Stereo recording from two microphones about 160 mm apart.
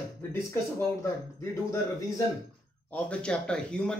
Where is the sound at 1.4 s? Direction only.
20° left (ahead or behind).